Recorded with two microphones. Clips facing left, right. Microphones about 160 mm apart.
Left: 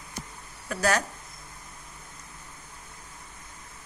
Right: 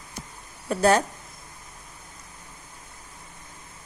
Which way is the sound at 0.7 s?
25° right (ahead or behind).